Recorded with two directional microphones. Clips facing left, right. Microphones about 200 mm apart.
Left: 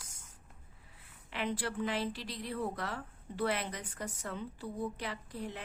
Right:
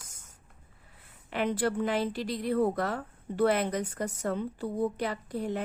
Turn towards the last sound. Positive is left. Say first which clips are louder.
# right 9 dB
turn(degrees=-45)  # may be behind; listen again after turning